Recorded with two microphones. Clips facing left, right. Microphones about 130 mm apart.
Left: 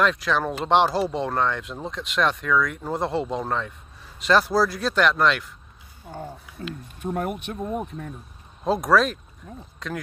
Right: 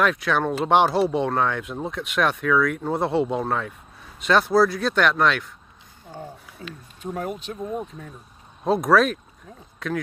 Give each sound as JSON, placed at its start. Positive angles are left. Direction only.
{"t": 0.0, "sound": "speech", "side_deg": 0}
{"t": 6.6, "sound": "speech", "side_deg": 50}
{"t": 8.6, "sound": "speech", "side_deg": 0}